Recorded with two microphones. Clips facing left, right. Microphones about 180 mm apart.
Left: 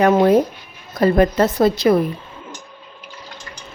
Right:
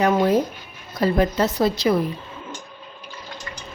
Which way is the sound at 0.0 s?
55° left (ahead or behind).